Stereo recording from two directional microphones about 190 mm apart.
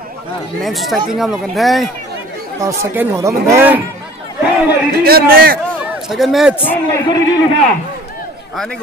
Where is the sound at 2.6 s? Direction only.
15° right (ahead or behind).